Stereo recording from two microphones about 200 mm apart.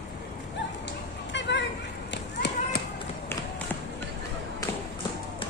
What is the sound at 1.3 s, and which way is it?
Children playing, 60° left (ahead or behind).